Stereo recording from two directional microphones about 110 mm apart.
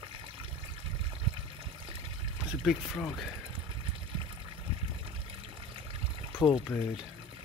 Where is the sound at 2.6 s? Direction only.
Centre (ahead or behind).